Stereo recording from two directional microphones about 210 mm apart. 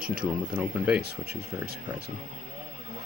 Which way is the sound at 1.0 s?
50° right (ahead or behind).